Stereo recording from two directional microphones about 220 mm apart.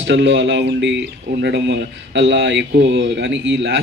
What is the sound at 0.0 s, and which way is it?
A man's voice, 55° right (ahead or behind).